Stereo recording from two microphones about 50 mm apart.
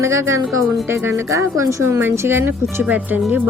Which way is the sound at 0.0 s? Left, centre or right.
Right.